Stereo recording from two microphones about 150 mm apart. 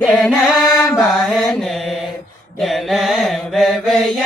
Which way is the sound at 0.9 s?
5° left (ahead or behind).